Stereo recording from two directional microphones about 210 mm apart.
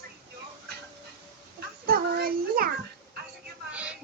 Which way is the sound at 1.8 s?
45° right (ahead or behind).